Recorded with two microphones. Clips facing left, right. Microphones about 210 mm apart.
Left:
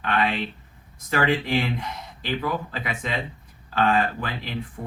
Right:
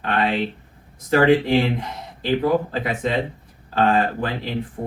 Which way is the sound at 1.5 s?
35° right (ahead or behind).